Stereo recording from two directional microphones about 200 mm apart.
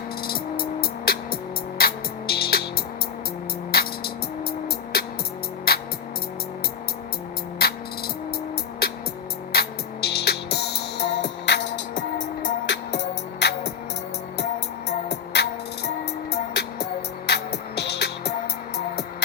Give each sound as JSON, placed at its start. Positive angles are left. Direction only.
{"t": 0.2, "sound": "music", "side_deg": 50}
{"t": 3.7, "sound": "music", "side_deg": 50}
{"t": 7.6, "sound": "music", "side_deg": 50}
{"t": 8.8, "sound": "music", "side_deg": 50}
{"t": 14.8, "sound": "music", "side_deg": 55}